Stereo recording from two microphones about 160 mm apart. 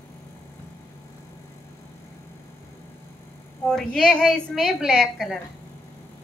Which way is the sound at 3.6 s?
5° left (ahead or behind).